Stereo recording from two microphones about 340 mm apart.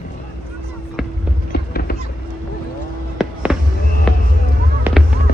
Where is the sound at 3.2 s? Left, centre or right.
Centre.